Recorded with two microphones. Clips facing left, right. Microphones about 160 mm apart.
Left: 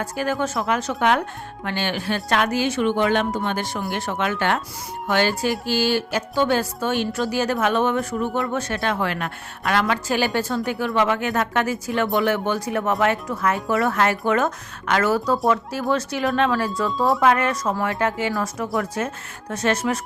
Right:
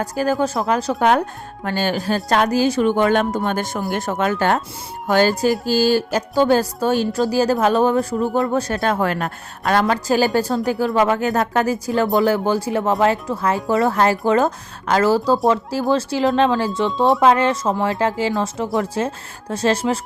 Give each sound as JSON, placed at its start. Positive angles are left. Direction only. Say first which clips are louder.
{"t": 0.0, "sound": "speech", "louder": "right 4 dB", "side_deg": -40}